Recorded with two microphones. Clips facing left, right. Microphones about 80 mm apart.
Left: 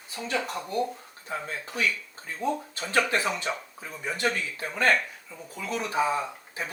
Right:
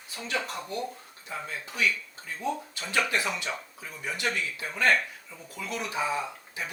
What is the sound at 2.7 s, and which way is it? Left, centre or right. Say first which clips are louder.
Speech: left 3 dB; left.